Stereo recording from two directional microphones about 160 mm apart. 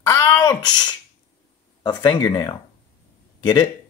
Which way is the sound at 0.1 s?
20° left (ahead or behind).